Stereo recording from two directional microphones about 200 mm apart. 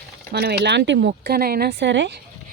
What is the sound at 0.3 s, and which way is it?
Speech, 50° right (ahead or behind).